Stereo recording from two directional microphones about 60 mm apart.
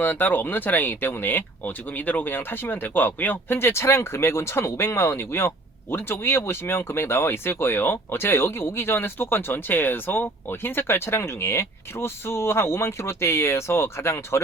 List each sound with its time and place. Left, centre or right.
0.0 s speech: left